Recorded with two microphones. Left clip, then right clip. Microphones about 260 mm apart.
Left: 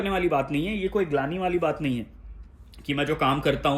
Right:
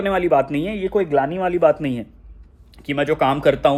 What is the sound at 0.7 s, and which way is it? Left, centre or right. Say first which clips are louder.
Speech: right 6 dB; right.